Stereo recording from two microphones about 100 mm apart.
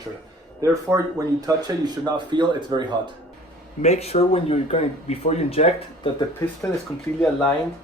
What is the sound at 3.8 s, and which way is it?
Speech, 90° left.